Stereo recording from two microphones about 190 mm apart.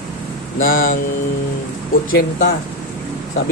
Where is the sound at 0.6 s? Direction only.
45° left (ahead or behind).